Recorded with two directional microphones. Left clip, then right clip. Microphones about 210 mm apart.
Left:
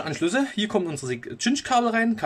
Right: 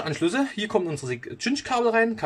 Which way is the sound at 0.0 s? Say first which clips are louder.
Even; 10° left (ahead or behind).